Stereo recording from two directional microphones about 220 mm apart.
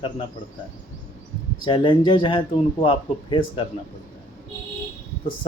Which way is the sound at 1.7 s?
20° left (ahead or behind).